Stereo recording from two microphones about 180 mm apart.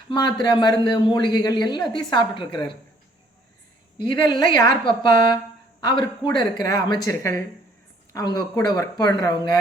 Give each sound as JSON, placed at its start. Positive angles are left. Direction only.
{"t": 0.1, "sound": "speech", "side_deg": 25}
{"t": 3.9, "sound": "speech", "side_deg": 25}
{"t": 5.8, "sound": "speech", "side_deg": 25}